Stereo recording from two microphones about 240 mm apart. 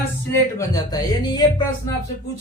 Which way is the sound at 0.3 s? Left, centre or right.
Centre.